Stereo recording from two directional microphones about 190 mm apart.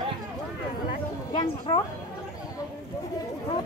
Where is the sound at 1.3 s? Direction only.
25° left (ahead or behind).